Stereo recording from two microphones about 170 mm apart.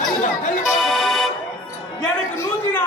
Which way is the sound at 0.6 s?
Centre (ahead or behind).